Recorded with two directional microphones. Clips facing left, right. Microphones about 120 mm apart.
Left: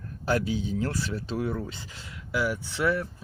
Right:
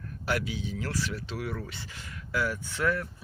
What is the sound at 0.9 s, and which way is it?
Speech, 25° left (ahead or behind).